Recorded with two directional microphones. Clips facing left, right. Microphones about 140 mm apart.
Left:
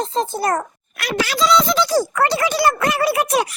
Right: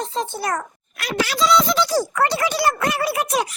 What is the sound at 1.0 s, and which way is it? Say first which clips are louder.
Speech: left 1 dB; 85° left.